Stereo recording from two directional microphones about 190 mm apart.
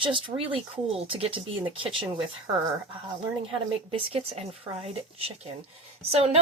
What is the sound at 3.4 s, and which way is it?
Speech, 30° right (ahead or behind).